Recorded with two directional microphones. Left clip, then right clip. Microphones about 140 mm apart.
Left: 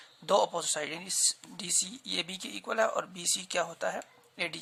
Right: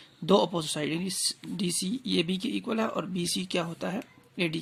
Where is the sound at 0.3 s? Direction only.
10° right (ahead or behind).